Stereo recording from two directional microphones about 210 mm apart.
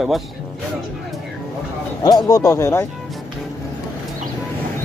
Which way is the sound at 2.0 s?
20° left (ahead or behind).